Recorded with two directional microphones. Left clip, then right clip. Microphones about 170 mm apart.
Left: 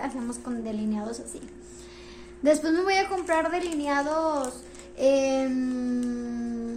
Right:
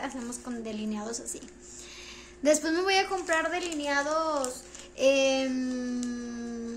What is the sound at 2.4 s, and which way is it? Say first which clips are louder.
A child's voice: left 2 dB; 15° right (ahead or behind).